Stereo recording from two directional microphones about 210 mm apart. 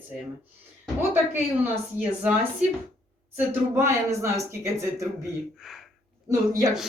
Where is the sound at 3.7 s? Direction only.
10° right (ahead or behind).